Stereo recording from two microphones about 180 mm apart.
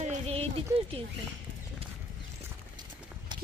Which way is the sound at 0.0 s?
40° right (ahead or behind).